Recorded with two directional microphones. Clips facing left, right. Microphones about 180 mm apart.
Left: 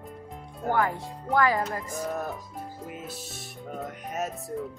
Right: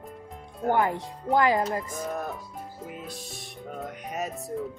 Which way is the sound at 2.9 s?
Centre (ahead or behind).